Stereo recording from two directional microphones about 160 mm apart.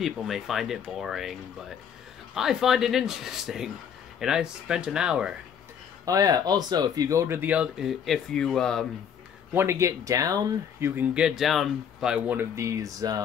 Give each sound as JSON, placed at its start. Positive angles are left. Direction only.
{"t": 0.0, "sound": "speech", "side_deg": 0}
{"t": 2.3, "sound": "speech", "side_deg": 0}
{"t": 6.0, "sound": "speech", "side_deg": -20}
{"t": 9.5, "sound": "speech", "side_deg": -15}
{"t": 11.0, "sound": "speech", "side_deg": -5}